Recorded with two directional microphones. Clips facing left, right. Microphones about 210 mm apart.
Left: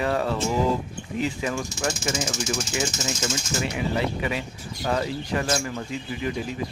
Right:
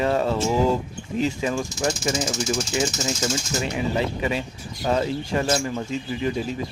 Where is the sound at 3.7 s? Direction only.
25° right (ahead or behind).